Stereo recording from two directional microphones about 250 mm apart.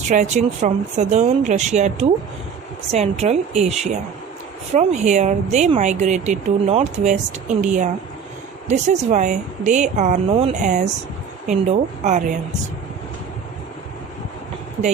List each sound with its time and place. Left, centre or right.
0.1 s speech: right